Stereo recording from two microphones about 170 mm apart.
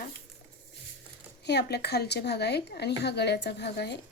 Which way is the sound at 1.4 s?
80° left.